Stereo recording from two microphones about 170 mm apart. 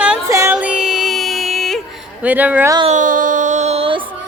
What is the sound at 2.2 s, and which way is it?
Speech, 10° right (ahead or behind).